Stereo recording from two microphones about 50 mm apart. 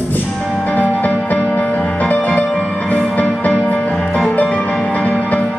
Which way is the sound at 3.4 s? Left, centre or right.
Left.